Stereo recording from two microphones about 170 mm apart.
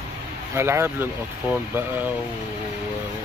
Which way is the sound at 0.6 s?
15° right (ahead or behind).